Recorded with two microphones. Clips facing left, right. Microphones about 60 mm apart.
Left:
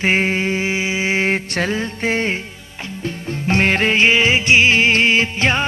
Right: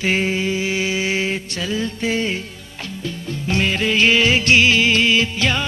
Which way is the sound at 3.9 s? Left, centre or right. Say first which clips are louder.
Right 2 dB; left.